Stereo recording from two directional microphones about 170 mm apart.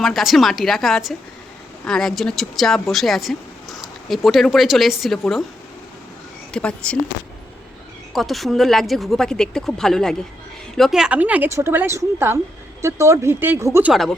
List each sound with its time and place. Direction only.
0.0 s speech: centre (ahead or behind)
6.5 s speech: 5° left (ahead or behind)
8.1 s a woman's voice: centre (ahead or behind); by 13.9 s 15° right (ahead or behind)
13.9 s speech: centre (ahead or behind)